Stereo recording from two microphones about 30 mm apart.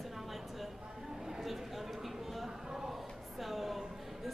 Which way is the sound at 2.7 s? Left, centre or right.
Centre.